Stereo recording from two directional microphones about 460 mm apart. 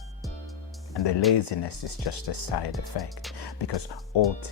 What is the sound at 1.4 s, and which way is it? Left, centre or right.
Speech, left.